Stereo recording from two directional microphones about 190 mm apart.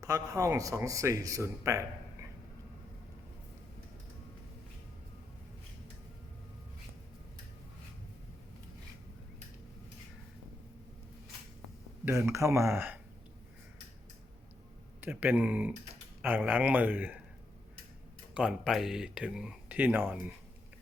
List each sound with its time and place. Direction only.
0.0 s speech: 15° right (ahead or behind)
12.0 s speech: 15° right (ahead or behind)
15.0 s speech: 10° right (ahead or behind)
18.3 s speech: 5° right (ahead or behind)